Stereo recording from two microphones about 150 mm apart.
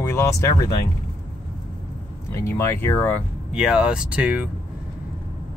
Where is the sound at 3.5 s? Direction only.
5° right (ahead or behind).